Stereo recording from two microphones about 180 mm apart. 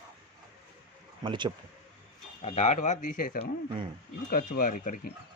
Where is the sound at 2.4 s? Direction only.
40° left (ahead or behind).